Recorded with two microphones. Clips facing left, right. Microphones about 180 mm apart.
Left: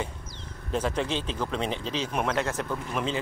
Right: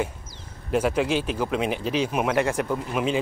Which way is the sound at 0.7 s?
10° right (ahead or behind).